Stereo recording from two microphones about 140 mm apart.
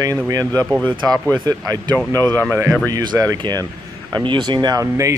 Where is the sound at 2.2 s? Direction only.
15° left (ahead or behind).